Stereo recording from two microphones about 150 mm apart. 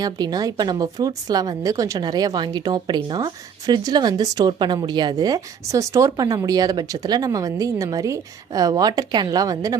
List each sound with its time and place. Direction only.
0.0 s speech: 25° right (ahead or behind)